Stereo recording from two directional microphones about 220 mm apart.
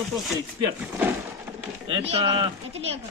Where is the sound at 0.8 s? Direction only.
5° right (ahead or behind).